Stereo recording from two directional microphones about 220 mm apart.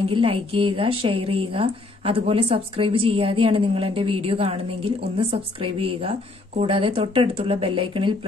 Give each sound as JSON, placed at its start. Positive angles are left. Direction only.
{"t": 0.1, "sound": "a woman's voice", "side_deg": -25}